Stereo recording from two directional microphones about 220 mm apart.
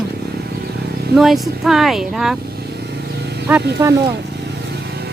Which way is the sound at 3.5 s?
5° right (ahead or behind).